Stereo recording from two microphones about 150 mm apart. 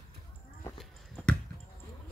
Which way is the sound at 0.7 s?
5° left (ahead or behind).